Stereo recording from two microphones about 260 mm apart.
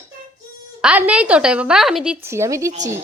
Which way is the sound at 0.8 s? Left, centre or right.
Centre.